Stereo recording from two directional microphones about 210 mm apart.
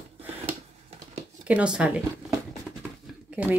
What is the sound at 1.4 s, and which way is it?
Speech, 5° right (ahead or behind).